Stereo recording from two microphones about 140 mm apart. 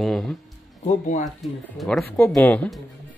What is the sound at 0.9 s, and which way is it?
Speech, 60° left (ahead or behind).